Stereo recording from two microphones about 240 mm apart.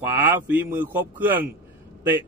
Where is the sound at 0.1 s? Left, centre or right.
Centre.